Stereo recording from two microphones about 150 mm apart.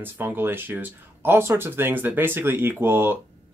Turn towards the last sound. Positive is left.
turn(degrees=-15)  # may be behind; listen again after turning